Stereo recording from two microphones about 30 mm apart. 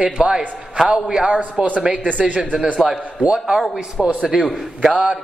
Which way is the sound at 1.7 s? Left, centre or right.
Right.